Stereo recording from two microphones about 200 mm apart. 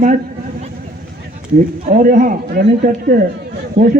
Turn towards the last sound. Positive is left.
turn(degrees=-30)  # may be behind; listen again after turning